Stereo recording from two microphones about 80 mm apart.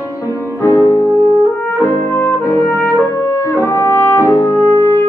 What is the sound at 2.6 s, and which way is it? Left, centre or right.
Music, left.